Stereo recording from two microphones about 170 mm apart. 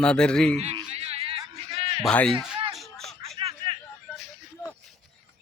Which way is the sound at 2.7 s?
Centre (ahead or behind).